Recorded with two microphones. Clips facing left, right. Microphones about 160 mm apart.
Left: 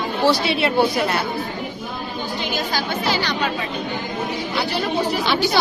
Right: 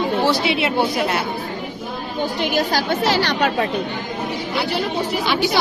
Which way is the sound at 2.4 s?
70° right (ahead or behind).